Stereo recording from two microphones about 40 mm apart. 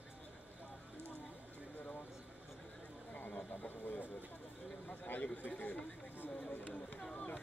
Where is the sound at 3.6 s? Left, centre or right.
Left.